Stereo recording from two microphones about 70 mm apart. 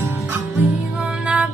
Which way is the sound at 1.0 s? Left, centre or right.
Centre.